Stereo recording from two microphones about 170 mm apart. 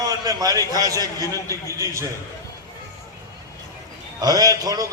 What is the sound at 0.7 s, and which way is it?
Speech, 20° right (ahead or behind).